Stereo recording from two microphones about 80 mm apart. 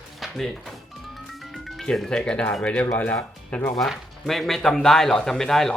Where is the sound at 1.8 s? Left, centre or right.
Centre; by 3.6 s left.